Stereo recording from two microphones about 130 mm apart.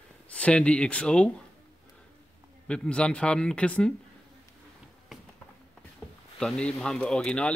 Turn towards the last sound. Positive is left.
turn(degrees=5)  # may be behind; listen again after turning